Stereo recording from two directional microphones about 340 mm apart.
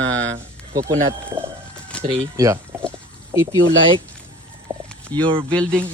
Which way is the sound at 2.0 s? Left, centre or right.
Centre.